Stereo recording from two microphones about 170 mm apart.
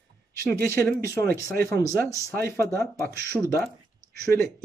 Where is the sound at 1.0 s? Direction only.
20° left (ahead or behind).